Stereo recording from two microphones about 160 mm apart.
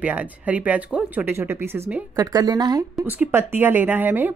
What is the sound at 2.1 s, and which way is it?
A woman's voice, 25° right (ahead or behind).